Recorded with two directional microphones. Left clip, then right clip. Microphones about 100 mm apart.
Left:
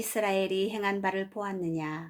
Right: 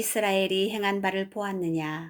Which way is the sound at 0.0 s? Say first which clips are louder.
Right 3 dB; 25° right (ahead or behind).